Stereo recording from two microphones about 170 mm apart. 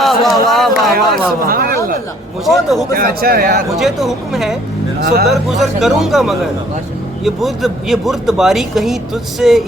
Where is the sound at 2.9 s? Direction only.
60° right (ahead or behind).